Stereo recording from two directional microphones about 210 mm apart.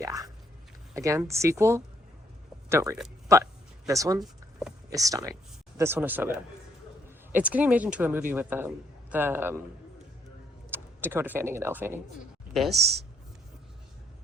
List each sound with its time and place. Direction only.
0.0 s a man's voice: 15° right (ahead or behind)
7.3 s a man's voice: 5° right (ahead or behind)
10.7 s speech: 10° right (ahead or behind)
12.7 s speech: 50° right (ahead or behind)